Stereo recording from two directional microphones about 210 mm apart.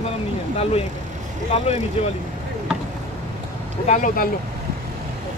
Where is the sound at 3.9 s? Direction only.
35° left (ahead or behind).